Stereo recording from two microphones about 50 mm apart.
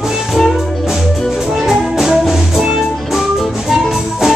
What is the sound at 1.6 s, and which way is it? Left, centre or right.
Music, centre.